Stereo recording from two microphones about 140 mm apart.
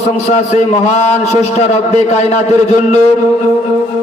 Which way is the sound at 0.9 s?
50° left (ahead or behind).